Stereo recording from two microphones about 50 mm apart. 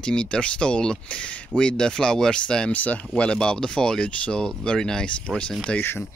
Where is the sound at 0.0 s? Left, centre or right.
Centre.